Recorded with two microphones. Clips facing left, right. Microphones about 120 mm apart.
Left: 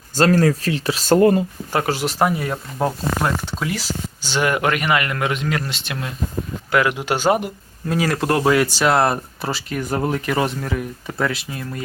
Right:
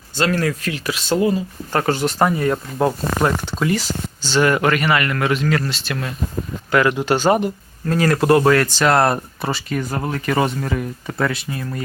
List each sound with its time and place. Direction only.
0.2 s speech: 40° left (ahead or behind)
1.0 s speech: 50° left (ahead or behind)
1.7 s speech: 5° left (ahead or behind)
4.2 s speech: 10° left (ahead or behind)
6.7 s speech: 5° left (ahead or behind)